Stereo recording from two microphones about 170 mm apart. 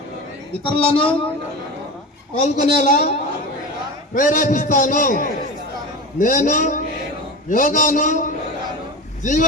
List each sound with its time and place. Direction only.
0.7 s a woman's voice: 30° left (ahead or behind)
2.4 s a man's voice: 50° left (ahead or behind)